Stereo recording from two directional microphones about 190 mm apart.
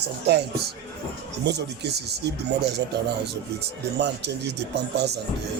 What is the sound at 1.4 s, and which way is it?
Speech, 60° right (ahead or behind).